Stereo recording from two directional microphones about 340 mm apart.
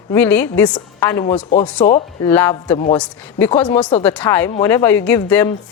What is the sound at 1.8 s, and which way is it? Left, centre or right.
A woman's voice, centre.